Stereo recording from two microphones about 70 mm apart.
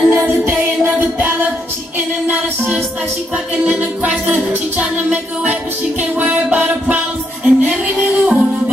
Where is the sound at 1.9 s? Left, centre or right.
Right.